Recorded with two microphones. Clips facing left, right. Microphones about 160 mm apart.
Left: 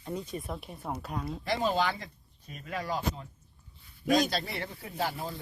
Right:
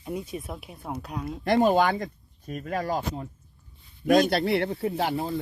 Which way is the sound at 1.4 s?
55° right (ahead or behind).